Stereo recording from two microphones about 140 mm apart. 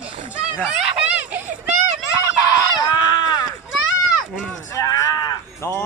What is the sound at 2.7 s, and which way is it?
Fowl, 30° left (ahead or behind).